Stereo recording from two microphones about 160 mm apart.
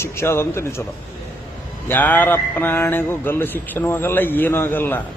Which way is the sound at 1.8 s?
10° left (ahead or behind).